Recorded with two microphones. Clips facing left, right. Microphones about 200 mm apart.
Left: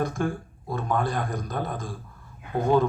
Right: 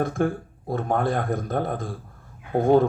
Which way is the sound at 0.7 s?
55° right (ahead or behind).